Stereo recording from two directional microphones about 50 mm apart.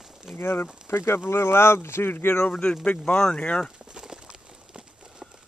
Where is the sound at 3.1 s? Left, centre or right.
Left.